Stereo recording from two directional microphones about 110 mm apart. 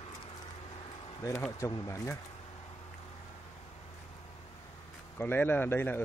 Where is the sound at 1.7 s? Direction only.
30° left (ahead or behind).